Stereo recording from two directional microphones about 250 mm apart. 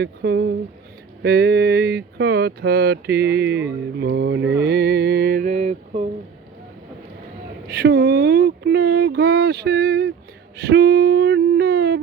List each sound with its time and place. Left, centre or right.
0.0 s speech: right
7.7 s speech: right
10.6 s a sound: right